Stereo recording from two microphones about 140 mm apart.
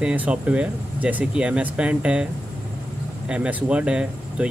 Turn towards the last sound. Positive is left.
turn(degrees=-5)  # may be behind; listen again after turning